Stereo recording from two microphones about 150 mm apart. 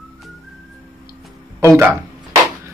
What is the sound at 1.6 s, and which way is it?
Speech, 20° right (ahead or behind).